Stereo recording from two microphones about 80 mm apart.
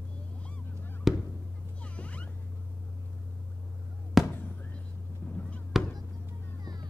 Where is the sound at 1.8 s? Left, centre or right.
Centre.